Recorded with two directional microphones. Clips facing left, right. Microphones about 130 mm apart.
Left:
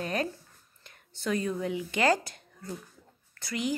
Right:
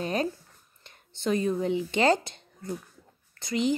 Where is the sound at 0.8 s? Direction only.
25° right (ahead or behind).